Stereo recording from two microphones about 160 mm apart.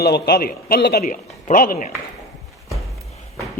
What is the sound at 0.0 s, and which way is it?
A man's voice, 80° left.